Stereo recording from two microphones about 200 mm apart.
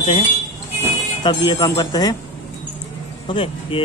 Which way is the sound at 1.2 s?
25° left (ahead or behind).